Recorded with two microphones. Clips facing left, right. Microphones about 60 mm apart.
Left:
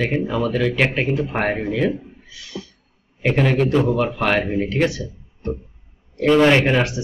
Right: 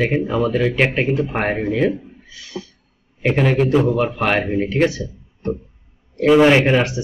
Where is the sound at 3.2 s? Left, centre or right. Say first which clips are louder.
Right 1 dB; centre.